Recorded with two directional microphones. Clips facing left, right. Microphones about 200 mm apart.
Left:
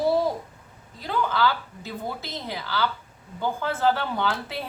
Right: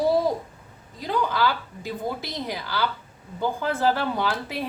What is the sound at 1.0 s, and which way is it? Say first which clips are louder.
A woman's voice: right 1 dB; 15° right (ahead or behind).